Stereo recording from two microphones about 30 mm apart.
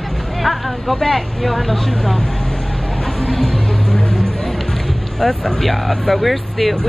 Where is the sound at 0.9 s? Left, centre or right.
Centre.